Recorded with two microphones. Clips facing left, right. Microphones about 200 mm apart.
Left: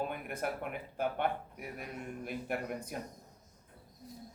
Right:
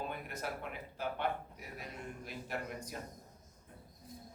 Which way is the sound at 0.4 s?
55° left (ahead or behind).